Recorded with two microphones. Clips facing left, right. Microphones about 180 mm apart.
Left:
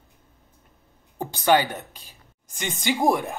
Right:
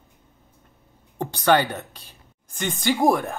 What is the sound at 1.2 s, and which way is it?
Speech, 10° left (ahead or behind).